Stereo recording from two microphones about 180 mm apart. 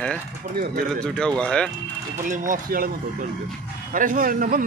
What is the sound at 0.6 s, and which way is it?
Speech, 55° right (ahead or behind).